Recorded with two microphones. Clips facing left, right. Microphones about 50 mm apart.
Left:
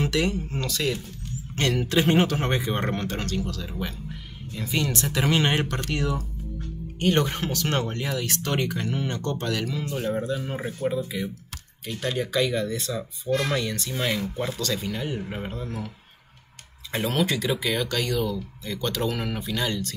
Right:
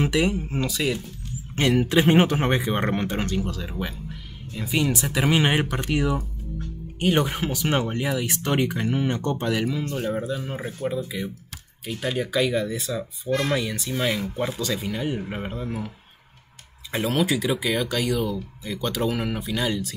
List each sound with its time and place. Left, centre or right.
0.0 s speech: centre
4.6 s speech: centre
10.0 s speech: centre
16.9 s speech: centre